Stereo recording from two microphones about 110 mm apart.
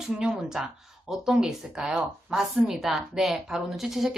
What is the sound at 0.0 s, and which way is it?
A woman's voice, 5° right (ahead or behind).